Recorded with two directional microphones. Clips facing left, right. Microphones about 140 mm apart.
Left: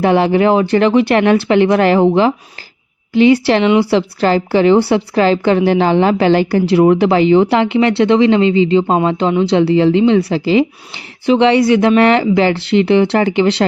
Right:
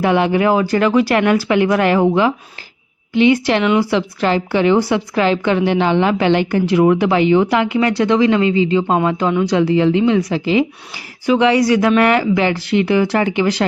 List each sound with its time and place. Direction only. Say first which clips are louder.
0.0 s a woman's voice: left 3 dB; 35° left (ahead or behind)